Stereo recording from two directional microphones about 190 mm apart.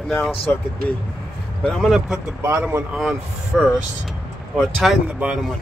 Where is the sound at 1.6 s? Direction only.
Centre (ahead or behind).